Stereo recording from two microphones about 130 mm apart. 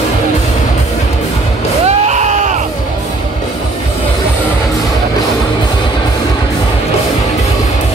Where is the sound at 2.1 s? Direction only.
65° right (ahead or behind).